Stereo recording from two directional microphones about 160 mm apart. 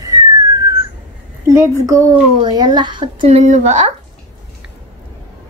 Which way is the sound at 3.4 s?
50° right (ahead or behind).